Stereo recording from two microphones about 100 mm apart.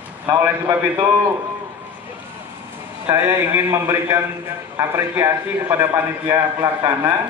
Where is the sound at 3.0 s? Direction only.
25° right (ahead or behind).